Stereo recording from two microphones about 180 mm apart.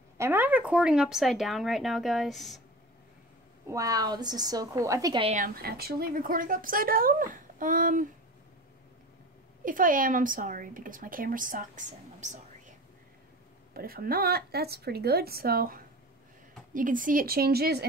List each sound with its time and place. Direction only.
0.2 s speech: 10° right (ahead or behind)
3.6 s a woman's voice: 20° right (ahead or behind)
5.2 s a woman's voice: 45° right (ahead or behind)
9.7 s a woman's voice: 50° right (ahead or behind)
13.7 s a woman's voice: 55° right (ahead or behind)